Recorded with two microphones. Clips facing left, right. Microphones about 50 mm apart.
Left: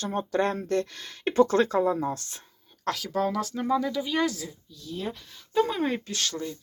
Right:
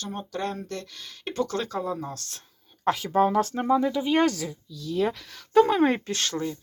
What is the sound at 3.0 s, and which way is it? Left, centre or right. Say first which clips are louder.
Speech: right 6 dB; right.